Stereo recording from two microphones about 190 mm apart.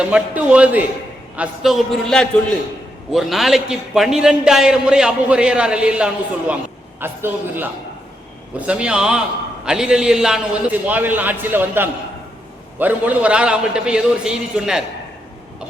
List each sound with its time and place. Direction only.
0.0 s a man's voice: 5° right (ahead or behind)